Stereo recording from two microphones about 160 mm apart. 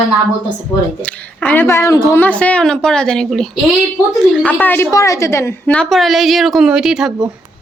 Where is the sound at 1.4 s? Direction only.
15° left (ahead or behind); by 7.1 s 5° right (ahead or behind).